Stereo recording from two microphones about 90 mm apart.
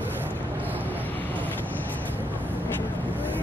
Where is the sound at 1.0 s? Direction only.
20° left (ahead or behind).